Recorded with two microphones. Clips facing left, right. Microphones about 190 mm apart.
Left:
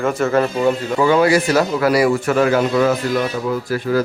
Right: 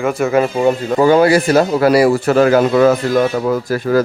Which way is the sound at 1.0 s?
40° right (ahead or behind).